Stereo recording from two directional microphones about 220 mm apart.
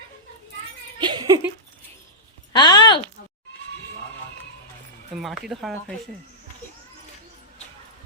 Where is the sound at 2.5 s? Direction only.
20° left (ahead or behind).